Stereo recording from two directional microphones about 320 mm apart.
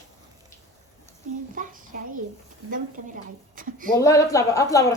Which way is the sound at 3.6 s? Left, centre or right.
Right.